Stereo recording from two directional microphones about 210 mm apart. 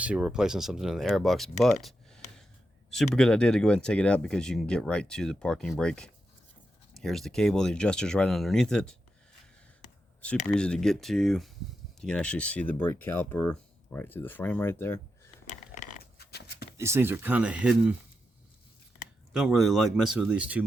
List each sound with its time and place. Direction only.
0.0 s speech: 5° right (ahead or behind)
10.5 s speech: 5° left (ahead or behind)
15.4 s a sound: 40° left (ahead or behind)
16.7 s speech: 10° right (ahead or behind)
19.3 s speech: centre (ahead or behind)